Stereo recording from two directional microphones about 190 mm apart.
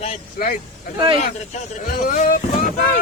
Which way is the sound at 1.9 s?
40° left (ahead or behind).